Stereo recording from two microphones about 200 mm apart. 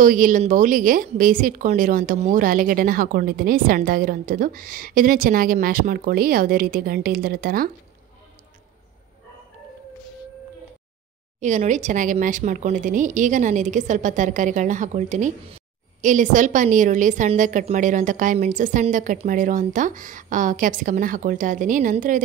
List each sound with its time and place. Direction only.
0.0 s a woman's voice: 40° right (ahead or behind)
11.3 s speech: 35° right (ahead or behind)